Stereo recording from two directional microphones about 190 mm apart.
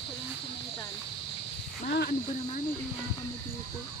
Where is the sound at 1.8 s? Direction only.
55° left (ahead or behind).